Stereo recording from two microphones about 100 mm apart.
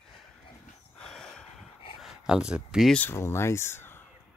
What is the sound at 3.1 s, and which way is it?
Speech, 25° left (ahead or behind).